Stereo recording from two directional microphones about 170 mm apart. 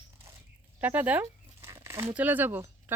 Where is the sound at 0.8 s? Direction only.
10° right (ahead or behind).